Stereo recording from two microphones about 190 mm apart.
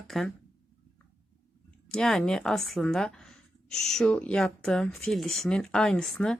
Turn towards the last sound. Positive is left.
turn(degrees=0)  # may be behind; listen again after turning